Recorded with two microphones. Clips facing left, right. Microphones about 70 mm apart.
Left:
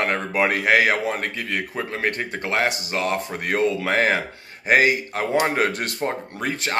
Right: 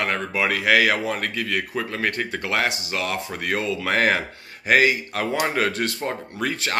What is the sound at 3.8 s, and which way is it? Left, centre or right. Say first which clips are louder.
Speech: even; centre.